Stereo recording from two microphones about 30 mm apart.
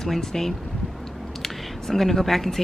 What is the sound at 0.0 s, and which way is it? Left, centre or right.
Speech, centre.